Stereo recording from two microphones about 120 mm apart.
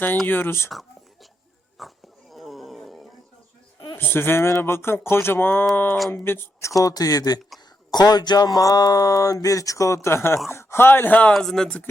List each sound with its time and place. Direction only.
0.3 s speech: 15° left (ahead or behind)
0.7 s whispering: centre (ahead or behind)
1.8 s bee: centre (ahead or behind)
2.3 s wild animals: centre (ahead or behind)
3.9 s a sound: 20° left (ahead or behind)
5.7 s speech: 15° left (ahead or behind)
6.1 s a sound: 20° left (ahead or behind)
11.3 s speech: 5° left (ahead or behind)